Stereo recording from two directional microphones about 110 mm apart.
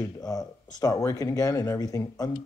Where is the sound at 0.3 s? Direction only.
35° left (ahead or behind).